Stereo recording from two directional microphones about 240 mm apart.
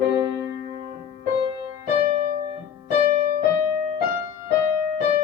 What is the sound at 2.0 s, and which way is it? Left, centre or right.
Piano, right.